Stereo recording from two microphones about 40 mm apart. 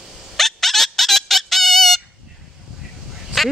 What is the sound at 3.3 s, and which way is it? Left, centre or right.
Quack, centre.